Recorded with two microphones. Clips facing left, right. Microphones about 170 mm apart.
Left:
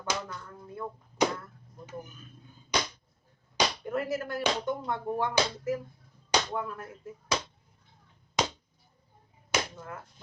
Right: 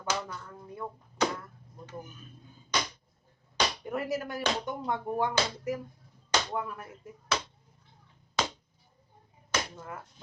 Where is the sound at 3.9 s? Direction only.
15° right (ahead or behind).